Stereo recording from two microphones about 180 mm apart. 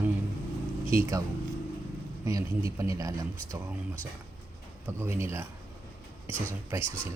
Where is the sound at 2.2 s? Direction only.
15° right (ahead or behind).